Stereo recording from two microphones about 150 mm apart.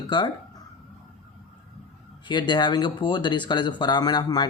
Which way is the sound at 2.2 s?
30° left (ahead or behind).